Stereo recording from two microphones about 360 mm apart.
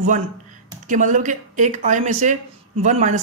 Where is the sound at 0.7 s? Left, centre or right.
Right.